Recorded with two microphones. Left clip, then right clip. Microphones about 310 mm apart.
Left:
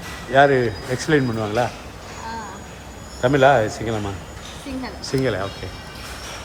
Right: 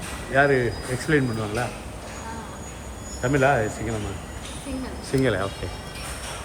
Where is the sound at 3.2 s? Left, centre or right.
Centre.